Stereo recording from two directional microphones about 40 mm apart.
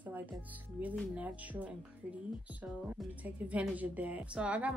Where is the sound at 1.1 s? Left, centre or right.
Right.